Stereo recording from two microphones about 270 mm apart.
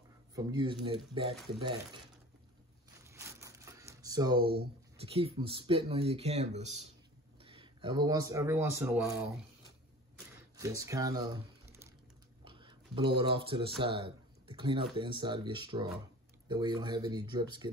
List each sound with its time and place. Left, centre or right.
0.4 s speech: centre
3.1 s a sound: centre
4.9 s a man's voice: right; by 9.3 s centre
10.6 s speech: centre
12.4 s typing: centre
13.2 s speech: centre